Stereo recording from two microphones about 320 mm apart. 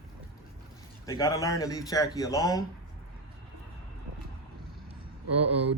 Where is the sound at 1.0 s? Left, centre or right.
Centre.